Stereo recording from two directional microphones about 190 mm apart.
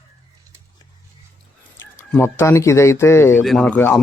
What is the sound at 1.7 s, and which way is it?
Speech, 10° left (ahead or behind).